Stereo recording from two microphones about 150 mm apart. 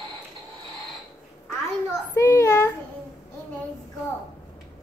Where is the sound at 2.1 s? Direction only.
20° left (ahead or behind).